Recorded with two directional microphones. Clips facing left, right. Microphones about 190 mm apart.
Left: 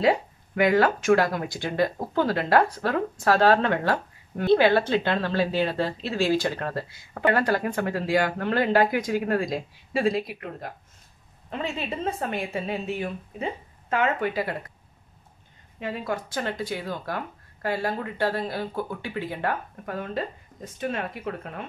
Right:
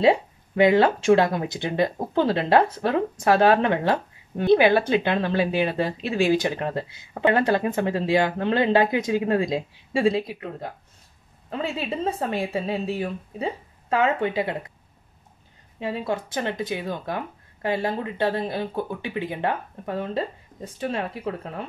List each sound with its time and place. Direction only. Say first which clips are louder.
0.0 s speech: right 3 dB; 25° right (ahead or behind)
12.0 s speech: right 3 dB; 30° right (ahead or behind)
15.8 s speech: right 3 dB; 25° right (ahead or behind)